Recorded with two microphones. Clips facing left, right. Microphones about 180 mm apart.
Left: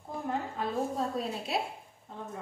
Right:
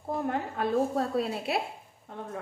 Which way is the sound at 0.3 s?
65° right (ahead or behind).